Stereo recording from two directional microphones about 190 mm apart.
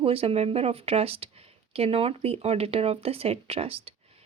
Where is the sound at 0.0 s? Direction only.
30° right (ahead or behind).